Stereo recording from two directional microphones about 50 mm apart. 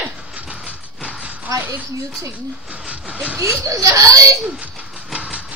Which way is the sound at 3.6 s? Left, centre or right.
Right.